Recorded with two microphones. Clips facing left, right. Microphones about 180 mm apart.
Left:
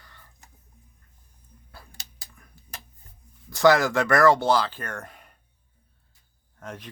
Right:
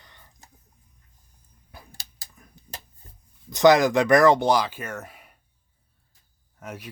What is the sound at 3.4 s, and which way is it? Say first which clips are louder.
Speech: right 2 dB; 20° right (ahead or behind).